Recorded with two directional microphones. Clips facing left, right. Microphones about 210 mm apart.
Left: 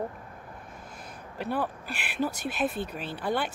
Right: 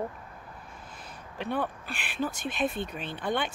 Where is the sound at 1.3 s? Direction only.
5° left (ahead or behind).